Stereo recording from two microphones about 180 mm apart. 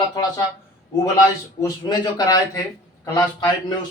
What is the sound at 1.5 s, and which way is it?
Speech, 20° left (ahead or behind).